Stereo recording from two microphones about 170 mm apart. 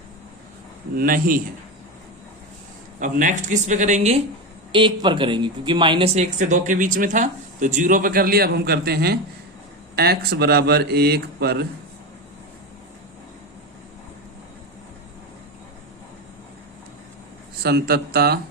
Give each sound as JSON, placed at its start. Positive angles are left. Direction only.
{"t": 0.9, "sound": "speech", "side_deg": -55}
{"t": 3.0, "sound": "speech", "side_deg": -50}
{"t": 4.7, "sound": "speech", "side_deg": -30}
{"t": 17.6, "sound": "speech", "side_deg": -70}